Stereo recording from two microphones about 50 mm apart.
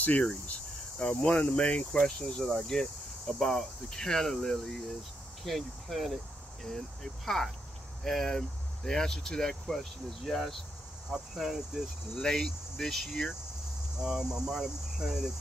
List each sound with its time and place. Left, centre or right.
0.2 s speech: left
1.9 s speech: centre
11.1 s cricket: centre
12.2 s speech: centre
13.9 s cricket: centre